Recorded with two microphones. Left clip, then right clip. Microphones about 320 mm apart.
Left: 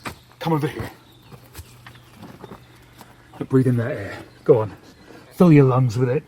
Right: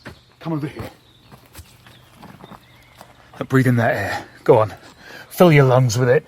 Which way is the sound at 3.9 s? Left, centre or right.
Right.